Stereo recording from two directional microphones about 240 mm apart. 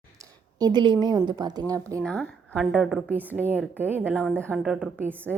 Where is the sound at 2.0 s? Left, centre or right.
Centre.